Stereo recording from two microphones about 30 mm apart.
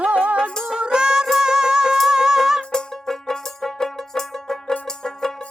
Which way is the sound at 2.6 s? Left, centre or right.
Centre.